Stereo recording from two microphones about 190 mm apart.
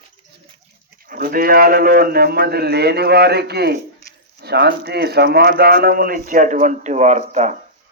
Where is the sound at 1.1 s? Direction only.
50° right (ahead or behind).